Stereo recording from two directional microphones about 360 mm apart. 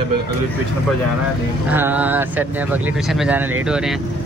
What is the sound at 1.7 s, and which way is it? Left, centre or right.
Speech, centre.